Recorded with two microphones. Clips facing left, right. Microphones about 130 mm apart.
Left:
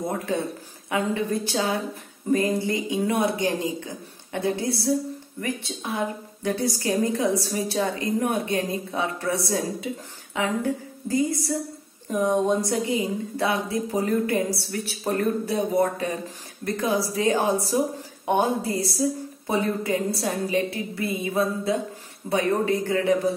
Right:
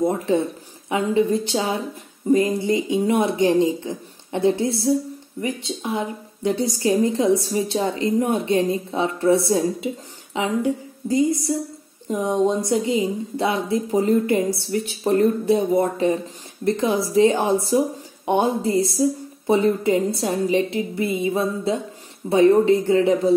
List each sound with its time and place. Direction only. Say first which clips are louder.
0.8 s a woman's voice: right 5 dB; 20° right (ahead or behind)